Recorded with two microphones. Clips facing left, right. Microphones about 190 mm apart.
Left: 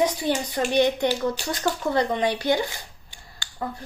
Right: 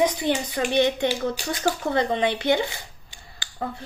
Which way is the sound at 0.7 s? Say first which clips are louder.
Left 1 dB; 20° right (ahead or behind).